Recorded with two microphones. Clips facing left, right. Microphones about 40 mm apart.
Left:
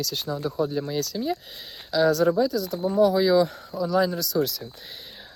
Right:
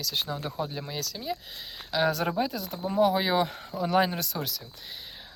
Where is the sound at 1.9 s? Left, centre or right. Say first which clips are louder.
Left 6 dB; right.